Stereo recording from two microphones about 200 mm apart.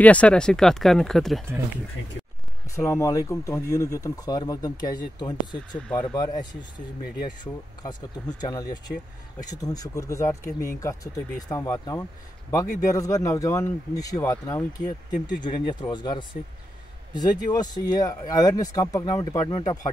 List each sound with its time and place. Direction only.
0.0 s speech: 5° left (ahead or behind)
2.7 s a man's voice: 15° left (ahead or behind)
5.8 s speech: 5° left (ahead or behind)
6.1 s speech: 20° left (ahead or behind)
7.8 s a man's voice: 20° left (ahead or behind)